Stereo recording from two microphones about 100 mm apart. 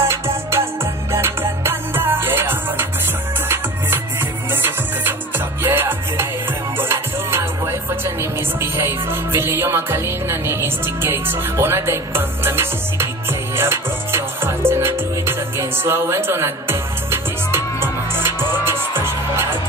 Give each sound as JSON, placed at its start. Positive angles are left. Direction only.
{"t": 0.1, "sound": "music", "side_deg": -25}